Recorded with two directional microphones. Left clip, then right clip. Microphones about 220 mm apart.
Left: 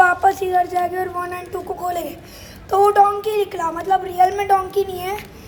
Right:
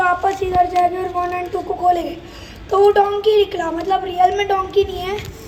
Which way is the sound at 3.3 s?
25° left (ahead or behind).